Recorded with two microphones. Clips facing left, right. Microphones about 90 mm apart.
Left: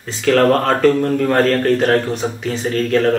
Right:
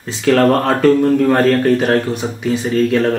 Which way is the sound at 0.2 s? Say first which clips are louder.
Right 1 dB; 5° right (ahead or behind).